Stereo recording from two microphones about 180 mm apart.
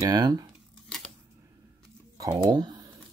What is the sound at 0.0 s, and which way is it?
Speech, 25° right (ahead or behind).